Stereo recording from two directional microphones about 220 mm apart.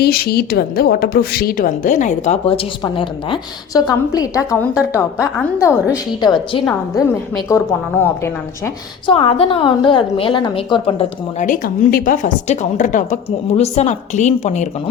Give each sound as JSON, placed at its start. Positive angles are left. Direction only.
{"t": 0.0, "sound": "a woman's voice", "side_deg": 45}
{"t": 9.0, "sound": "a woman's voice", "side_deg": 25}